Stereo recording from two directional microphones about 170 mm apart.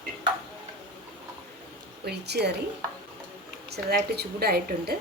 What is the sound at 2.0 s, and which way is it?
Speech, 75° right (ahead or behind).